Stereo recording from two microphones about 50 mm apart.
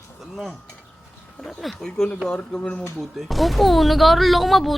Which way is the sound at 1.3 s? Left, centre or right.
Centre.